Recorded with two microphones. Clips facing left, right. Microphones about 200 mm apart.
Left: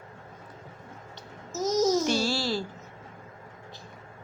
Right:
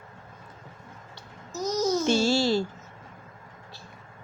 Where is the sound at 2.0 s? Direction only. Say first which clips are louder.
Right 5 dB; 25° right (ahead or behind).